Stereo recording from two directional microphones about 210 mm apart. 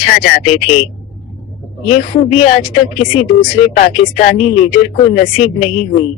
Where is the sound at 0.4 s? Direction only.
30° left (ahead or behind).